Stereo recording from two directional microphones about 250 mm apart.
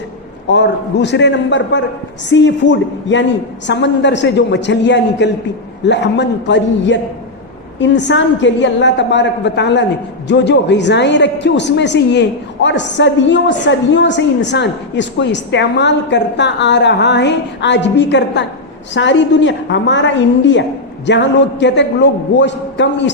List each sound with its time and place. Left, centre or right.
0.4 s a woman's voice: left